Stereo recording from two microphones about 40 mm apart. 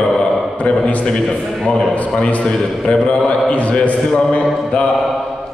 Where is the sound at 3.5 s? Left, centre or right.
Left.